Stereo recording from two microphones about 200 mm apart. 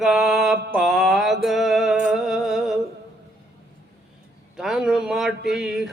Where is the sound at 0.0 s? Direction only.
Centre (ahead or behind).